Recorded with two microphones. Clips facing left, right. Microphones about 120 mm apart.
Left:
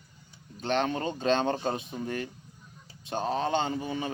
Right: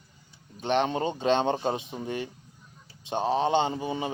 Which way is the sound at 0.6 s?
20° right (ahead or behind).